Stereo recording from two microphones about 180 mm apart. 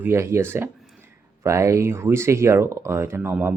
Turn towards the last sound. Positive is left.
turn(degrees=-10)  # may be behind; listen again after turning